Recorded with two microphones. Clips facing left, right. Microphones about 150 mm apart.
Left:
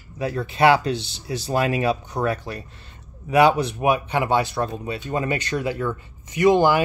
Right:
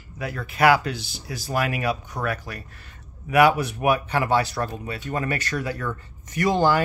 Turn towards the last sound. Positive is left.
turn(degrees=15)  # may be behind; listen again after turning